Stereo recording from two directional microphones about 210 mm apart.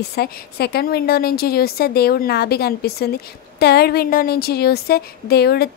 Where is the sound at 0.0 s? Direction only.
50° left (ahead or behind).